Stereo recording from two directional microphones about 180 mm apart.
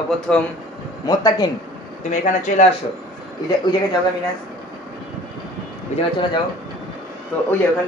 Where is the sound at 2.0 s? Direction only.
40° left (ahead or behind).